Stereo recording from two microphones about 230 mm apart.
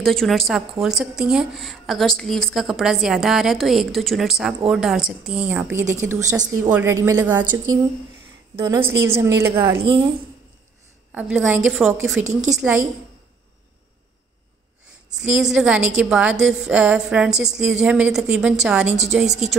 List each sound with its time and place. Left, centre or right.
0.0 s a woman's voice: centre; by 10.1 s right
11.1 s a woman's voice: centre
12.3 s a woman's voice: right
15.1 s a woman's voice: centre